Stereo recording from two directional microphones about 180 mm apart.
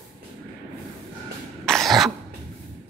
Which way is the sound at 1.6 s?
Centre (ahead or behind).